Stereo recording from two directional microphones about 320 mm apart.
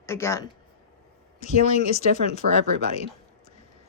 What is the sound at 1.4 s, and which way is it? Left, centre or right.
Speech, left.